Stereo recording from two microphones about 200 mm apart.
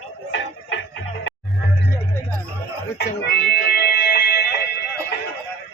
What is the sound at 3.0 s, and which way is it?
Music, 55° left (ahead or behind).